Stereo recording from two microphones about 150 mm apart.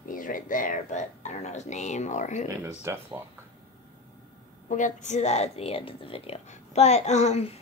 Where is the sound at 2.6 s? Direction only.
15° right (ahead or behind).